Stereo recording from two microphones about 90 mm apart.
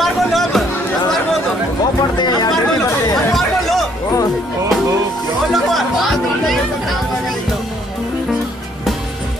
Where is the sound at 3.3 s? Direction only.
Centre (ahead or behind).